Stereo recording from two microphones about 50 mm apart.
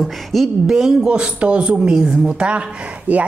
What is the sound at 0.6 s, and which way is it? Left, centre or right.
A woman's voice, centre.